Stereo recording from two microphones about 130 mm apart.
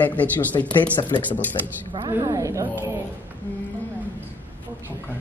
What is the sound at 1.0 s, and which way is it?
Speech, 35° left (ahead or behind).